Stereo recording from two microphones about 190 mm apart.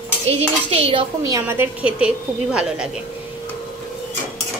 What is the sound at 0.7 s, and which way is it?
Speech, 30° right (ahead or behind).